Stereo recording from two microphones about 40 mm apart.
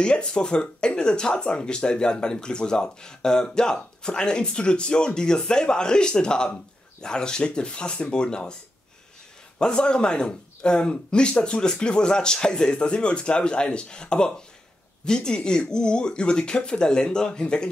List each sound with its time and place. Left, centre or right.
0.0 s speech: left
9.6 s speech: left